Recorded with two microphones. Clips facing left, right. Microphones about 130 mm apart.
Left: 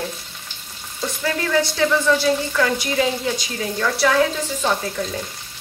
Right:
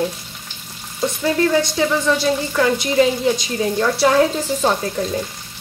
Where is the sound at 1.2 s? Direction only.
20° right (ahead or behind).